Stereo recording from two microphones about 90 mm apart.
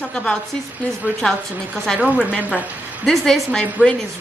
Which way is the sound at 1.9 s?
10° right (ahead or behind).